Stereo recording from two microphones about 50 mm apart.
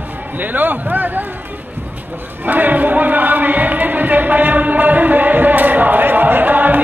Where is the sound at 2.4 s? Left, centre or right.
Right.